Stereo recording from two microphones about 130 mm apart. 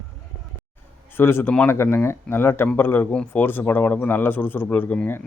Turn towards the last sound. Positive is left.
turn(degrees=15)  # may be behind; listen again after turning